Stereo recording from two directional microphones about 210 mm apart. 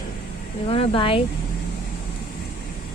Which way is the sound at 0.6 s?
25° left (ahead or behind).